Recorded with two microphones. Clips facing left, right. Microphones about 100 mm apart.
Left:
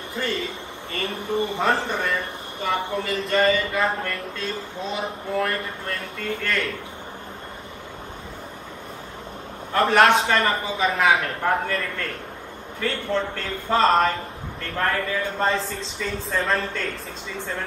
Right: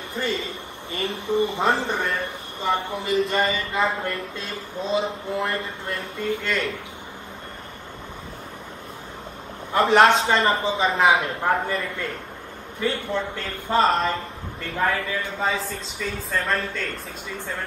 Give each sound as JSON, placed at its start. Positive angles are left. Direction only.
{"t": 0.9, "sound": "a man's voice", "side_deg": -20}
{"t": 9.7, "sound": "a man's voice", "side_deg": -20}
{"t": 11.2, "sound": "a man's voice", "side_deg": -15}